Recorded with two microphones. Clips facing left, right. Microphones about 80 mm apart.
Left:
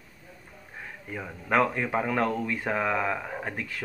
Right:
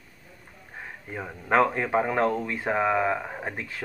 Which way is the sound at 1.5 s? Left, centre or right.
Right.